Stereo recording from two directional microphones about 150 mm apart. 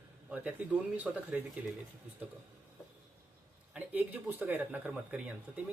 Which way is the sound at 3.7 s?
10° right (ahead or behind).